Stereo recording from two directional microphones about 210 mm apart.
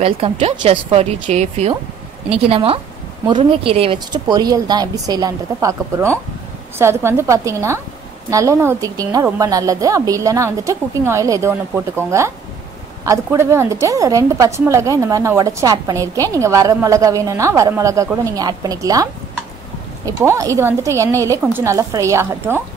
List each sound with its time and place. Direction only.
0.0 s a woman's voice: 30° right (ahead or behind)
20.1 s a woman's voice: 15° right (ahead or behind)